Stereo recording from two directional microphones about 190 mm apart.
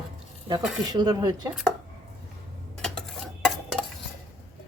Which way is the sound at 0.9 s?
20° right (ahead or behind).